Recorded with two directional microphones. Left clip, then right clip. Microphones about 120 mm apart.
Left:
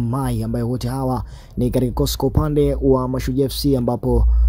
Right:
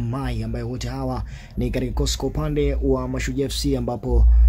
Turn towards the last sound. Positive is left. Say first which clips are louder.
# left 6 dB
turn(degrees=40)  # may be behind; listen again after turning